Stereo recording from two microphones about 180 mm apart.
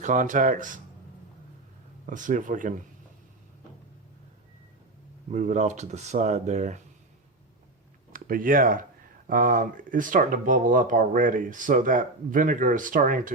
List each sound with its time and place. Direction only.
0.0 s speech: 45° right (ahead or behind)
2.0 s speech: 45° right (ahead or behind)
5.3 s speech: 40° right (ahead or behind)
8.1 s speech: 50° right (ahead or behind)